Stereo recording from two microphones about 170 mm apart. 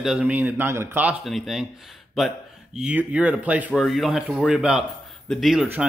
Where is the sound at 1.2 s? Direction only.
Centre (ahead or behind).